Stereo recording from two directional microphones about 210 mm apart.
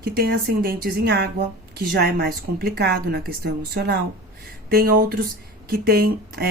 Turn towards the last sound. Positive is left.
turn(degrees=-50)  # may be behind; listen again after turning